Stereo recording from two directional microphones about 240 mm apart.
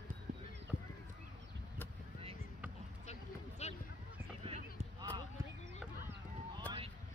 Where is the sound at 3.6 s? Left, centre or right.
Left.